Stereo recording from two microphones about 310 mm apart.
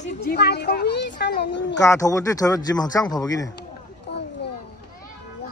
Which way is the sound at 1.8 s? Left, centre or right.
Centre.